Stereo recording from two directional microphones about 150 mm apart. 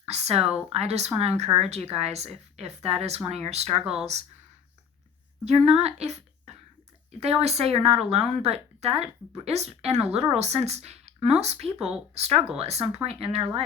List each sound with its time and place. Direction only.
0.0 s speech: 45° right (ahead or behind)
5.5 s speech: 45° right (ahead or behind)